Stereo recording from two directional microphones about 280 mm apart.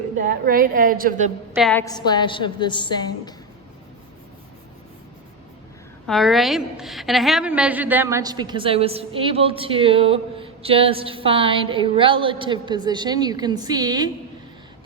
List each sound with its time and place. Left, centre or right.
0.2 s a woman's voice: right
1.5 s a woman's voice: centre
1.8 s a woman's voice: centre
6.1 s a woman's voice: centre